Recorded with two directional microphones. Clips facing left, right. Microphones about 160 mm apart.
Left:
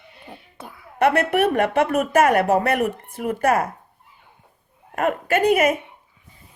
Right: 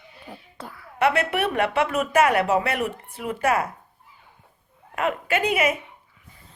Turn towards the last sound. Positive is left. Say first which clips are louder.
# left 5 dB
turn(degrees=45)  # may be behind; listen again after turning